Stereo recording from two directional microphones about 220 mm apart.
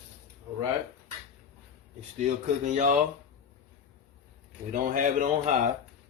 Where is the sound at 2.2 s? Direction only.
35° right (ahead or behind).